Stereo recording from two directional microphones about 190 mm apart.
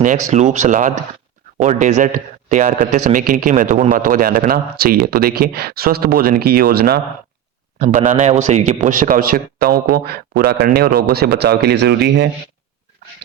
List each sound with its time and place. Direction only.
0.3 s a man's voice: 40° right (ahead or behind); by 7.0 s 55° right (ahead or behind)
7.8 s a man's voice: 45° right (ahead or behind); by 12.3 s 60° right (ahead or behind)